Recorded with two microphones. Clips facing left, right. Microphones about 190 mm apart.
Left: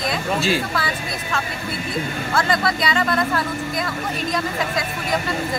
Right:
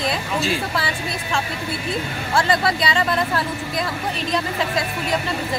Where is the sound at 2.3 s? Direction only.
30° right (ahead or behind).